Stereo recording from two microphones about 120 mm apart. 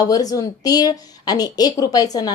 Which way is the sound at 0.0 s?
30° left (ahead or behind).